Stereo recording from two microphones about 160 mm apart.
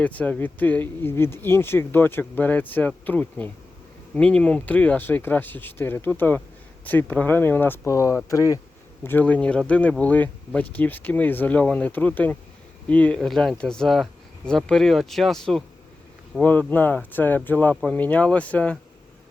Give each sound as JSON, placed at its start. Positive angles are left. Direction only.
{"t": 0.0, "sound": "speech", "side_deg": 10}
{"t": 9.0, "sound": "speech", "side_deg": 10}